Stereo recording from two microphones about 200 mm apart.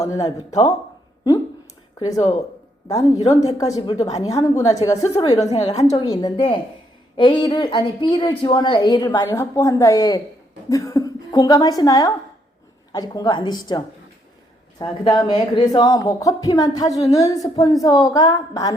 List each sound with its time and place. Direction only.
0.0 s a woman's voice: 15° left (ahead or behind)
0.3 s speech: 35° left (ahead or behind)
2.0 s speech: 35° left (ahead or behind)
3.6 s a woman's voice: 20° left (ahead or behind)
5.5 s speech: 35° left (ahead or behind)
5.9 s a woman's voice: 15° left (ahead or behind)